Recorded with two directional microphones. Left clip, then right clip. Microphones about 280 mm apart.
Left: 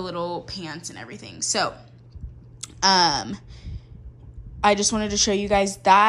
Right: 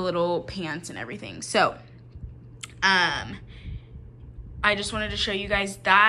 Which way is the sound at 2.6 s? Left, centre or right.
Centre.